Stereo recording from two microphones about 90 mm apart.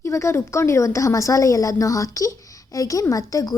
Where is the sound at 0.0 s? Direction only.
35° left (ahead or behind).